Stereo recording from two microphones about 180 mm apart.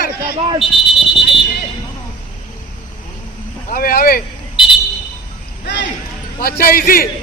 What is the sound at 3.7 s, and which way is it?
Speech, 55° left (ahead or behind).